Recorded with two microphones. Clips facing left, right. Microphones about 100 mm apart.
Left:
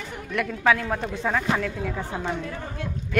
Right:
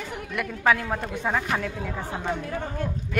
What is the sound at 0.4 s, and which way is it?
A woman's voice, 5° right (ahead or behind).